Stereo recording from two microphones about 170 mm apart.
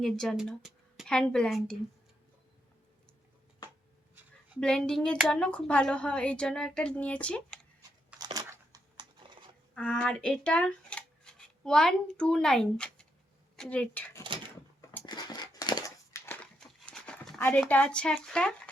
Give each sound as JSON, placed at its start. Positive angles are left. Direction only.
{"t": 0.0, "sound": "a woman's voice", "side_deg": 0}
{"t": 4.6, "sound": "a woman's voice", "side_deg": 5}
{"t": 8.2, "sound": "crumpling", "side_deg": -20}
{"t": 9.7, "sound": "speech", "side_deg": 5}
{"t": 15.0, "sound": "a sound", "side_deg": 25}
{"t": 16.2, "sound": "crumpling", "side_deg": 10}